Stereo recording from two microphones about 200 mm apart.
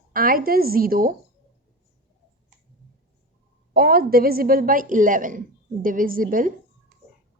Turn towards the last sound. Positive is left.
turn(degrees=-45)  # may be behind; listen again after turning